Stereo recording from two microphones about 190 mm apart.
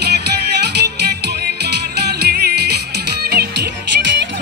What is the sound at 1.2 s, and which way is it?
Music, 60° right (ahead or behind).